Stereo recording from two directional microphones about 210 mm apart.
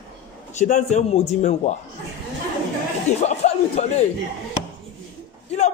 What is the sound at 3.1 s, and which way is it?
Speech, 30° left (ahead or behind).